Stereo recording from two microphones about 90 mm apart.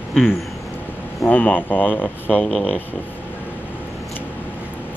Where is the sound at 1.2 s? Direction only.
20° left (ahead or behind).